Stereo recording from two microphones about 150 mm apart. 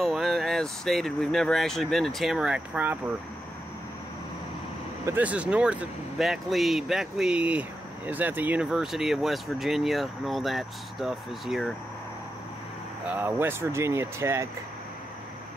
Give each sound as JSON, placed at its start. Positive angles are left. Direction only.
{"t": 0.0, "sound": "speech", "side_deg": 0}
{"t": 5.0, "sound": "speech", "side_deg": -10}
{"t": 13.1, "sound": "speech", "side_deg": -15}